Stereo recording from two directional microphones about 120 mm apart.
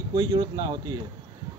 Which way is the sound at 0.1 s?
35° right (ahead or behind).